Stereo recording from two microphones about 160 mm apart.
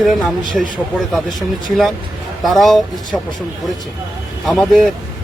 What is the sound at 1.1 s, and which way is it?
A man's voice, centre (ahead or behind).